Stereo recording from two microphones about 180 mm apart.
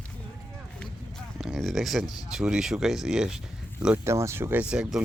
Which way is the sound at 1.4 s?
Centre (ahead or behind).